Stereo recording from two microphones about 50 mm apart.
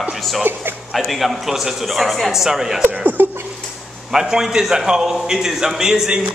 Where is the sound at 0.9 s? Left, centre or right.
Centre.